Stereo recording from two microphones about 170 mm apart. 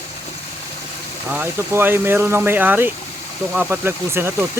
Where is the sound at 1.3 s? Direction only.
10° right (ahead or behind).